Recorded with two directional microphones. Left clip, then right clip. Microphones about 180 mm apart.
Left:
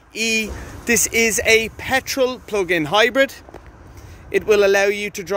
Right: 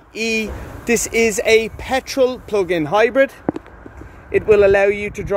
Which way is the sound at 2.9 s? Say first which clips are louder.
Right 2 dB; 15° left (ahead or behind).